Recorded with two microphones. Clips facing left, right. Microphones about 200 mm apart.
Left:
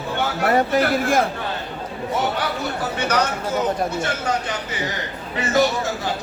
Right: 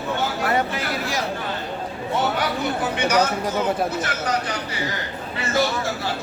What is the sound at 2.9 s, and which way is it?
Speech, 10° right (ahead or behind).